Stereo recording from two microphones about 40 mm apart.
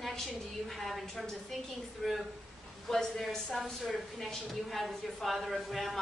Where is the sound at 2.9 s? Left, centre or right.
Centre.